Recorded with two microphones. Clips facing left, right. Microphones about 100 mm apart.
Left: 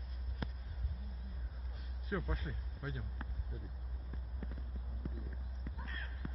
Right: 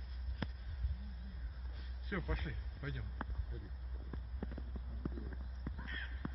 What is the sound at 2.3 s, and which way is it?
Speech, 30° left (ahead or behind).